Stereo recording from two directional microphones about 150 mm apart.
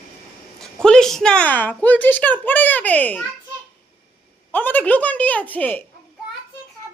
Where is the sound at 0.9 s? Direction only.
5° left (ahead or behind).